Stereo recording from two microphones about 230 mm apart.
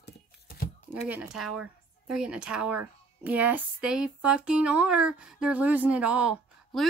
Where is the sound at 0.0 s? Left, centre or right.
Left.